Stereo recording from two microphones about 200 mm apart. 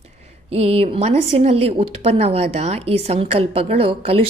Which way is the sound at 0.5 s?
30° right (ahead or behind).